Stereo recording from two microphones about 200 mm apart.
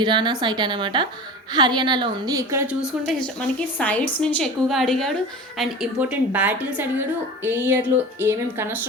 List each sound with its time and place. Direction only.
0.0 s a woman's voice: 20° right (ahead or behind)
2.8 s a woman's voice: centre (ahead or behind)